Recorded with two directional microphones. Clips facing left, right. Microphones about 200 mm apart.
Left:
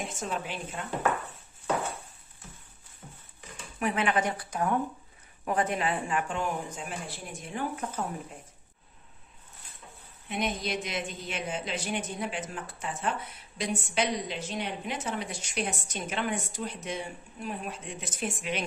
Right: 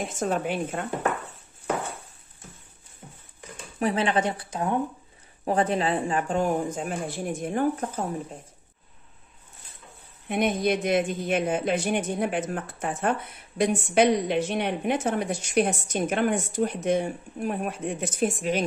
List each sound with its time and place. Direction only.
0.2 s speech: 50° right (ahead or behind)
3.8 s a woman's voice: 30° right (ahead or behind)
10.2 s speech: 55° right (ahead or behind)